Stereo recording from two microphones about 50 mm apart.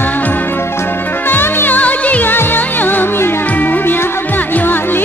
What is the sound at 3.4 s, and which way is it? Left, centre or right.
Music, left.